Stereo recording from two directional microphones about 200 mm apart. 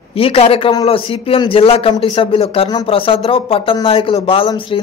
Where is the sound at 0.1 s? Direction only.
30° left (ahead or behind).